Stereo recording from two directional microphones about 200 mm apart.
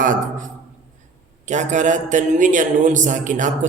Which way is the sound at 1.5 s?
35° right (ahead or behind).